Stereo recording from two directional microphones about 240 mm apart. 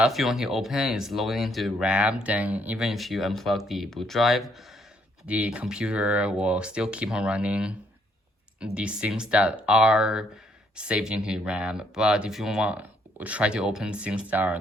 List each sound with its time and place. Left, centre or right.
0.0 s speech: centre